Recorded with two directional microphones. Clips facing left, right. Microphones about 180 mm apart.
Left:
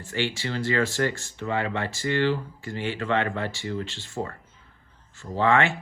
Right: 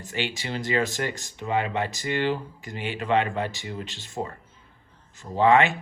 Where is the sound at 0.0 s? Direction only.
15° right (ahead or behind).